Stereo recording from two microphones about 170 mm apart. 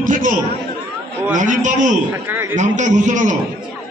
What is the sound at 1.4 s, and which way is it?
Speech, 45° right (ahead or behind).